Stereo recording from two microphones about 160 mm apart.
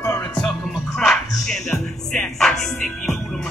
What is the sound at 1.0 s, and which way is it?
Music, 5° left (ahead or behind).